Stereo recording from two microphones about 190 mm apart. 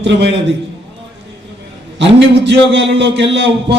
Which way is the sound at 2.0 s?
70° right (ahead or behind).